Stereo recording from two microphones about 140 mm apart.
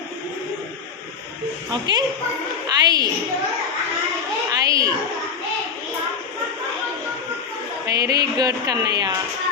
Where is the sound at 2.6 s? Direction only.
30° right (ahead or behind).